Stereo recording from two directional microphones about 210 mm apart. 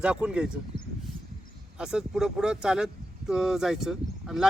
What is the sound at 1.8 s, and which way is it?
Speech, 5° right (ahead or behind).